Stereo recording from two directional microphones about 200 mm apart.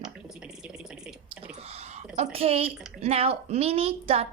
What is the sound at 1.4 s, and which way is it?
Speech, 30° right (ahead or behind).